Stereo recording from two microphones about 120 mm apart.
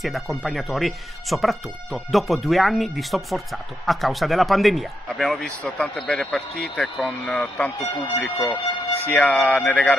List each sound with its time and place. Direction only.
0.0 s speech: centre (ahead or behind)
8.2 s speech: 25° left (ahead or behind); by 9.8 s 5° left (ahead or behind)